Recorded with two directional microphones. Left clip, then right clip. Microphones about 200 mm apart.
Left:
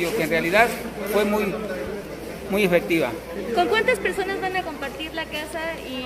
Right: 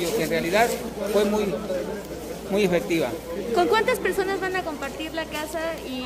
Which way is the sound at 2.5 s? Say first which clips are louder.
Left 2 dB; centre (ahead or behind).